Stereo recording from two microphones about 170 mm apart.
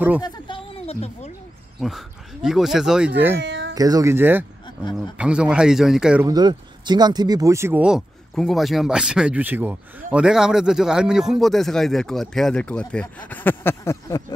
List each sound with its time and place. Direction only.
0.2 s a sound: 30° left (ahead or behind)
1.8 s speech: centre (ahead or behind)
3.3 s a sound: 90° right
3.7 s speech: 20° right (ahead or behind)
4.6 s a man's voice: 25° left (ahead or behind)
5.1 s speech: 5° right (ahead or behind)
6.2 s speech: 25° right (ahead or behind); by 14.2 s 15° left (ahead or behind)